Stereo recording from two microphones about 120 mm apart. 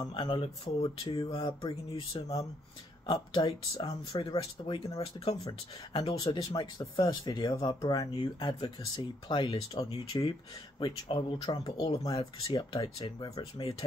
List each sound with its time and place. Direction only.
0.0 s speech: 45° left (ahead or behind)
3.1 s speech: 45° left (ahead or behind)
10.1 s speech: 35° left (ahead or behind)